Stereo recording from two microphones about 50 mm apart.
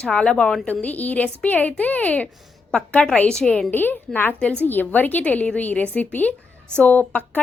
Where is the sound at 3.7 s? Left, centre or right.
Left.